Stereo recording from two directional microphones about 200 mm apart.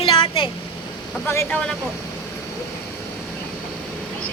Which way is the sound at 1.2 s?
10° left (ahead or behind).